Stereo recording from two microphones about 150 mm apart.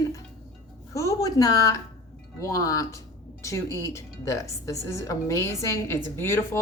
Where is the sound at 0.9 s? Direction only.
20° left (ahead or behind).